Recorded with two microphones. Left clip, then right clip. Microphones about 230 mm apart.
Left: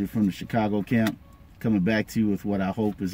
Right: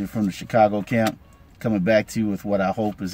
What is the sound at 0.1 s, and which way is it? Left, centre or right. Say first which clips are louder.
Speech: right 5 dB; right.